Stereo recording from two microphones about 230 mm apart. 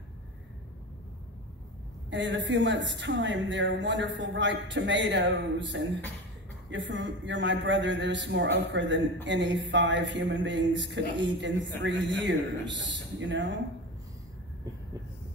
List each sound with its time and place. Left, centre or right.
2.0 s a man's voice: right